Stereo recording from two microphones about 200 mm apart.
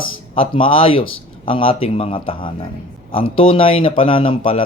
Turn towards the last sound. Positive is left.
turn(degrees=25)  # may be behind; listen again after turning